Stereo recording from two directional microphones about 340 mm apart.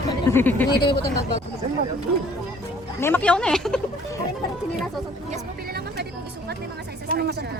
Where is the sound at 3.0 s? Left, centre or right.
Centre.